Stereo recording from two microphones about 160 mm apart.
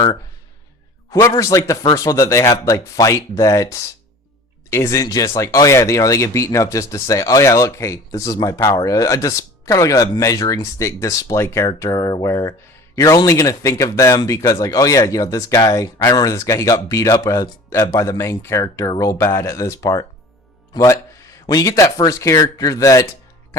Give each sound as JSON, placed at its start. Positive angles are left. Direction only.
{"t": 1.1, "sound": "speech", "side_deg": 20}